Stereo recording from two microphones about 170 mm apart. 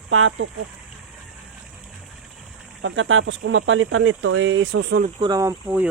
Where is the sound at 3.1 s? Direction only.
90° right.